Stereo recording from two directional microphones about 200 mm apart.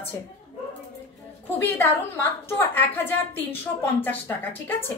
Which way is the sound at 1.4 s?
10° left (ahead or behind).